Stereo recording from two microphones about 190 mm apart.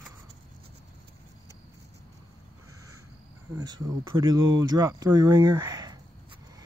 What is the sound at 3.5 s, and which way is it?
Speech, 20° right (ahead or behind).